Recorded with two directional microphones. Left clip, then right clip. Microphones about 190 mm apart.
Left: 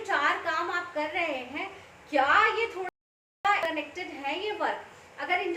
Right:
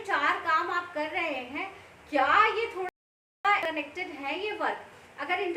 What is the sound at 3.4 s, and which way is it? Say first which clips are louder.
A woman's voice: even; 20° right (ahead or behind).